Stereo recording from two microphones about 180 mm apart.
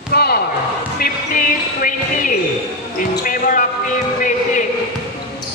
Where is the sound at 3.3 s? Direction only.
50° left (ahead or behind).